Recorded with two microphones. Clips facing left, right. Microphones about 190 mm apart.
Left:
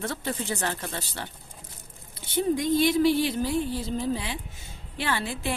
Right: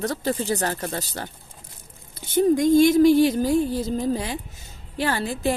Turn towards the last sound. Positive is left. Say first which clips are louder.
# right 6 dB
turn(degrees=-40)  # may be behind; listen again after turning